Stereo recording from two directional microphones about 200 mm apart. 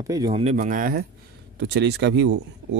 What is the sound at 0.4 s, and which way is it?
Speech, 40° right (ahead or behind).